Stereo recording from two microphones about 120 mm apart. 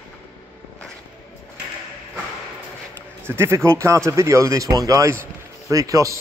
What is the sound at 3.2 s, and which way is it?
Speech, 20° right (ahead or behind).